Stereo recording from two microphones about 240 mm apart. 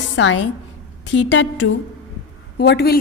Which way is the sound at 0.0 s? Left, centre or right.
Left.